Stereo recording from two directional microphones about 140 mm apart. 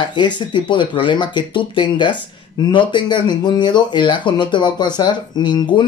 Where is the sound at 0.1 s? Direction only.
35° left (ahead or behind).